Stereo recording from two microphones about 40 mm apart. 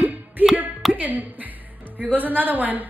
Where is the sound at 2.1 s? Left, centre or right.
Right.